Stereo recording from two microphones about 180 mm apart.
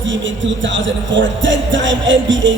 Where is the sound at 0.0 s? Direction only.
90° right.